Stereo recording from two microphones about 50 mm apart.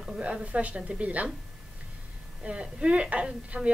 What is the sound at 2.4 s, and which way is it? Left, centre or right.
A woman's voice, right.